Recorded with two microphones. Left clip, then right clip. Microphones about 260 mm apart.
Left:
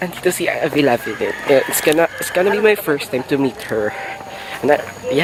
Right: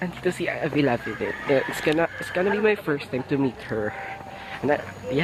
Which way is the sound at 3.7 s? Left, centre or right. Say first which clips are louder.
Left 8 dB; right.